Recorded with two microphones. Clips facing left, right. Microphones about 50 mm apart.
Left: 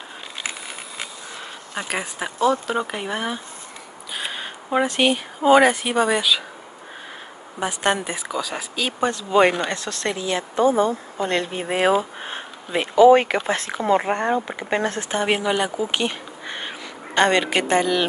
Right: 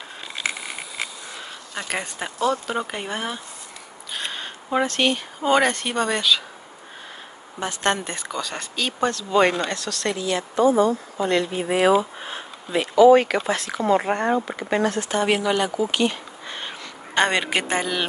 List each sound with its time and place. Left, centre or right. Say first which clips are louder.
1.8 s speech: left 2 dB; centre
7.6 s speech: left 2 dB; centre; by 11.0 s left
11.1 s speech: right 1 dB; left; by 14.7 s centre
14.7 s speech: right 1 dB; left
17.1 s speech: left 2 dB; centre